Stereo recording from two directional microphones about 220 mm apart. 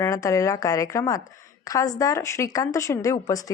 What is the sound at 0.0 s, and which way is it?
Speech, 15° left (ahead or behind).